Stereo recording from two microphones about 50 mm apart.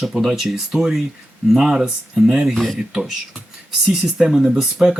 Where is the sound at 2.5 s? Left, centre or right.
Centre.